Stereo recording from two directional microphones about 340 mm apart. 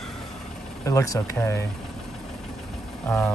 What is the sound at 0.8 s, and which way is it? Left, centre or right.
Speech, centre.